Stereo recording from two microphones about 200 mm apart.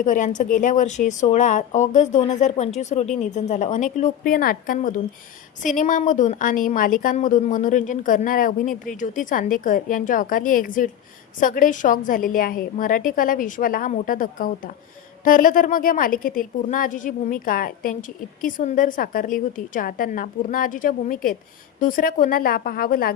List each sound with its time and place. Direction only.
0.0 s a woman's voice: 40° left (ahead or behind)